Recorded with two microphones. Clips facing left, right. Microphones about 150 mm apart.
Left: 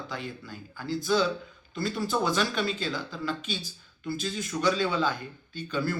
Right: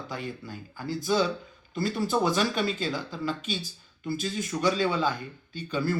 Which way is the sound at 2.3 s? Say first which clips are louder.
Right 1 dB; 45° right (ahead or behind).